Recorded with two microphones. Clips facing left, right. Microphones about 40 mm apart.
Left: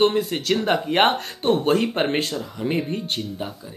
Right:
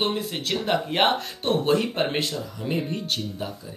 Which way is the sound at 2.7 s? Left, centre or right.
Left.